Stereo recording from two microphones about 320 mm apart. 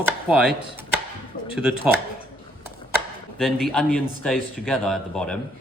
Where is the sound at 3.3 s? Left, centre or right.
Centre.